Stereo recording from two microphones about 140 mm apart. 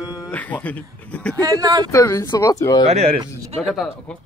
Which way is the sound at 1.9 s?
20° left (ahead or behind).